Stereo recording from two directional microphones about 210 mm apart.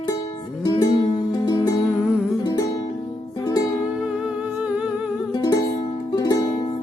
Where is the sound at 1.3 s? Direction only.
20° left (ahead or behind).